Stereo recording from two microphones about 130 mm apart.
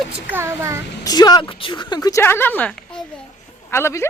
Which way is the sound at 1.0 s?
30° left (ahead or behind).